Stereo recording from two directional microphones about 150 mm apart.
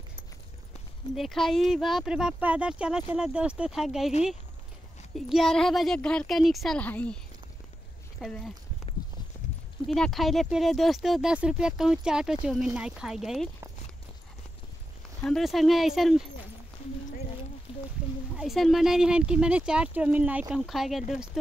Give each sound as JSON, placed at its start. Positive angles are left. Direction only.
{"t": 1.1, "sound": "speech", "side_deg": 0}
{"t": 5.1, "sound": "speech", "side_deg": 0}
{"t": 8.2, "sound": "speech", "side_deg": 0}
{"t": 9.8, "sound": "speech", "side_deg": 5}
{"t": 15.2, "sound": "speech", "side_deg": 0}
{"t": 17.7, "sound": "a sound", "side_deg": 35}
{"t": 18.3, "sound": "speech", "side_deg": 0}